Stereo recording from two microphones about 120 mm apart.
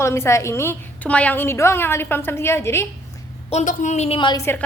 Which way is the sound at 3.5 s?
80° left.